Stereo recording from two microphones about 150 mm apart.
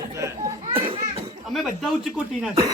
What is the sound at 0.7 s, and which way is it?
Speech, 35° right (ahead or behind).